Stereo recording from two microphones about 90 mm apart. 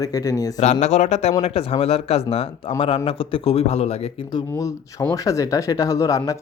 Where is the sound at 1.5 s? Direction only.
90° left.